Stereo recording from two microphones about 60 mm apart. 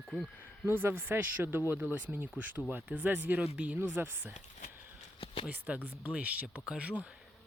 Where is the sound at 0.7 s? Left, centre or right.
Right.